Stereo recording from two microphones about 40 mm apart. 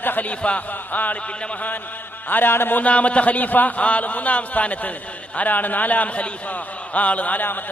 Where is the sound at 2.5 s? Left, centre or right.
Left.